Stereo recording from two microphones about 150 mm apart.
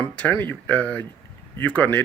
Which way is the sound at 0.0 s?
10° left (ahead or behind).